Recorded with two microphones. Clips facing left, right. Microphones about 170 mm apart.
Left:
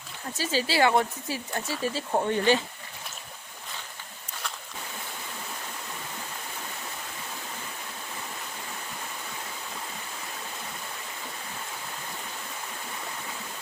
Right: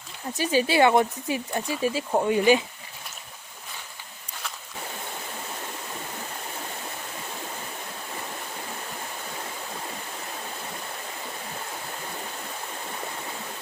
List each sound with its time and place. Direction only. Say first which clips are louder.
0.3 s speech: right 4 dB; 15° right (ahead or behind)